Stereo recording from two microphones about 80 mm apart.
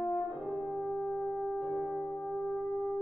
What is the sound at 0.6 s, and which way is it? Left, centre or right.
French horn, left.